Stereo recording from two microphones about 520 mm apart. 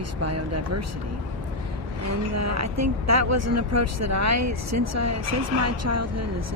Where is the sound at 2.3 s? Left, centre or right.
Right.